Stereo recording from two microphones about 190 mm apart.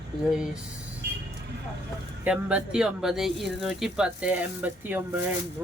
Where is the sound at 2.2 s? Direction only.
5° right (ahead or behind).